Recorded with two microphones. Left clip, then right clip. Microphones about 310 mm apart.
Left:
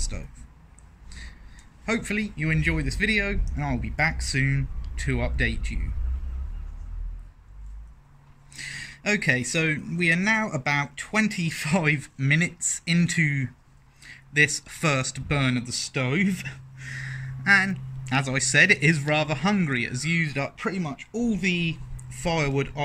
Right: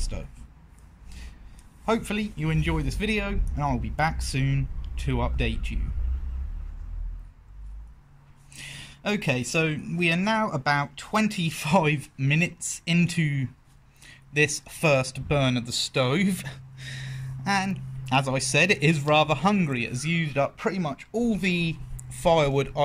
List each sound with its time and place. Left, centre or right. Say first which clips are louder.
1.9 s speech: right 1 dB; centre
8.5 s speech: left 5 dB; centre